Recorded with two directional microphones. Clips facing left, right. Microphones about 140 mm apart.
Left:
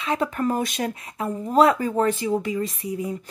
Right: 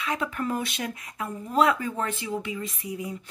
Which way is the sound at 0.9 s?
30° left (ahead or behind).